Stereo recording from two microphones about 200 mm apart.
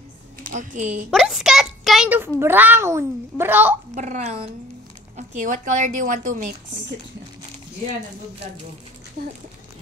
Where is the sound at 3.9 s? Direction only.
35° right (ahead or behind).